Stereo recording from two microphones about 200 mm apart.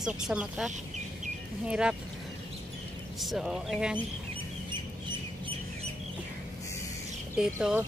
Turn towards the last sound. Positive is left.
turn(degrees=-5)  # may be behind; listen again after turning